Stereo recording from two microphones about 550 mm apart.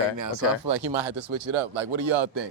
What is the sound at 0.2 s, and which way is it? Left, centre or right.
Speech, right.